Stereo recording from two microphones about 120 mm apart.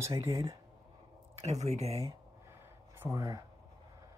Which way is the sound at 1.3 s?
65° right (ahead or behind).